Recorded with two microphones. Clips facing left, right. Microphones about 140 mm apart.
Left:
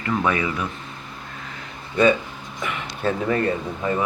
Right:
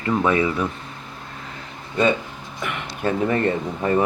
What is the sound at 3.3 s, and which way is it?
Speech, 30° right (ahead or behind).